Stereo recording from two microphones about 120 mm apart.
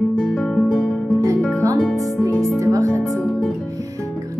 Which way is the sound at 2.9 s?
10° left (ahead or behind).